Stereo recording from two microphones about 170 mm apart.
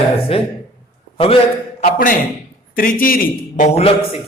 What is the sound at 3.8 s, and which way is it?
Speech, 35° left (ahead or behind).